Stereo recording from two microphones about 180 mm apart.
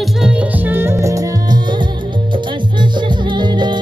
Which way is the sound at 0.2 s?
10° right (ahead or behind).